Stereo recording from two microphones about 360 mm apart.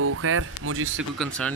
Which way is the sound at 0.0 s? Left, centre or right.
Right.